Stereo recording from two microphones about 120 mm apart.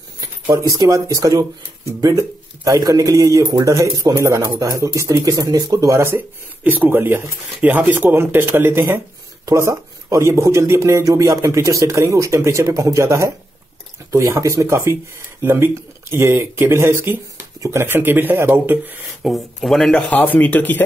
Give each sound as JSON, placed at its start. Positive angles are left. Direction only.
{"t": 0.2, "sound": "speech", "side_deg": -25}
{"t": 2.6, "sound": "speech", "side_deg": -30}
{"t": 19.2, "sound": "speech", "side_deg": 0}